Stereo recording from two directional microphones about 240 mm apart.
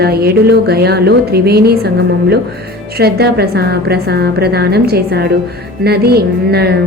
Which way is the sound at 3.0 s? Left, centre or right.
Right.